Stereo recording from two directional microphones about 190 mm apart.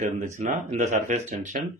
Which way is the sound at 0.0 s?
40° right (ahead or behind).